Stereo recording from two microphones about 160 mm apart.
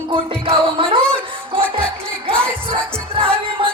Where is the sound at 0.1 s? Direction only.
35° right (ahead or behind).